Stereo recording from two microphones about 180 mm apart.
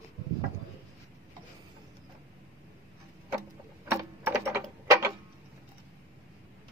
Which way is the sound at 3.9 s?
10° right (ahead or behind).